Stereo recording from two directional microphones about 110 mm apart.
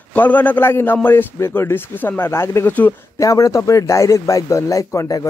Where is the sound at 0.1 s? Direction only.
15° left (ahead or behind).